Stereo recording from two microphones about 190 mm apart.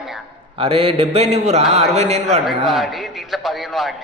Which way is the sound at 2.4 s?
Centre (ahead or behind).